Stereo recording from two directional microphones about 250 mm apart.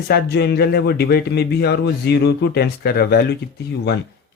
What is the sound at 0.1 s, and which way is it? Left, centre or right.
Speech, left.